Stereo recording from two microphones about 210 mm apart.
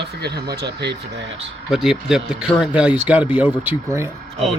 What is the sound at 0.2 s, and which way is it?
Speech, 50° right (ahead or behind).